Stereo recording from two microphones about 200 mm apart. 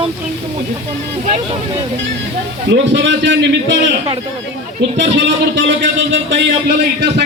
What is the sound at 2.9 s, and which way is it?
A man's voice, 65° right (ahead or behind).